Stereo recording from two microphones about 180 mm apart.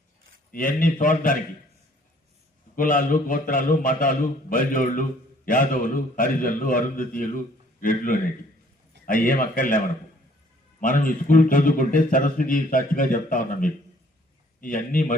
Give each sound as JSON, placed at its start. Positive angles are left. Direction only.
{"t": 0.5, "sound": "a man's voice", "side_deg": 50}
{"t": 2.7, "sound": "a man's voice", "side_deg": 50}